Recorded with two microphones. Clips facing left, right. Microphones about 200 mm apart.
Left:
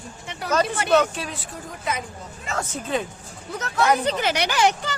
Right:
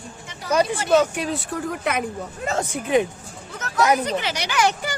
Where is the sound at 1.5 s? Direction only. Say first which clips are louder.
Right 4 dB; 65° right (ahead or behind).